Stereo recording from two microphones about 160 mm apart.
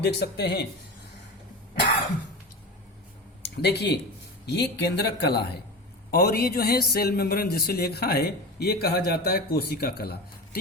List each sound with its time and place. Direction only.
0.0 s speech: 90° left
3.6 s speech: 90° left
6.1 s a man's voice: 75° left (ahead or behind)